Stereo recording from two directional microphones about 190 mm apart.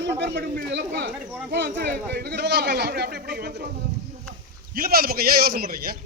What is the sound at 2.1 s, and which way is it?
A man's voice, 60° right (ahead or behind).